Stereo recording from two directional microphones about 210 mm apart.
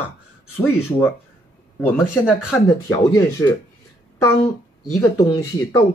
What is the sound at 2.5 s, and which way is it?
Speech, 15° left (ahead or behind).